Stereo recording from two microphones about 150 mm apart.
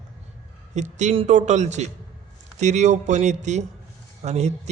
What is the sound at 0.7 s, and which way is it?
A man's voice, 50° right (ahead or behind).